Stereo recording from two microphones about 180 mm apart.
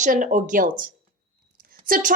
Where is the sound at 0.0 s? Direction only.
45° right (ahead or behind).